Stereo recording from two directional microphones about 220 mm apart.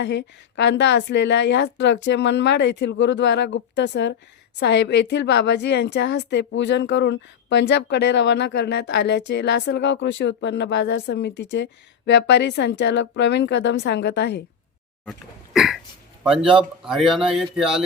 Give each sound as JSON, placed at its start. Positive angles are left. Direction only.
{"t": 0.0, "sound": "a woman's voice", "side_deg": 50}
{"t": 15.5, "sound": "a sound", "side_deg": 0}
{"t": 16.3, "sound": "speech", "side_deg": 0}